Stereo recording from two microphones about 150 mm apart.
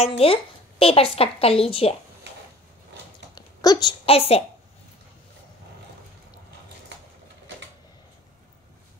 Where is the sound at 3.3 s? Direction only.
25° left (ahead or behind).